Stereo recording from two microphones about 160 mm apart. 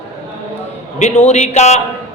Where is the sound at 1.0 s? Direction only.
45° left (ahead or behind).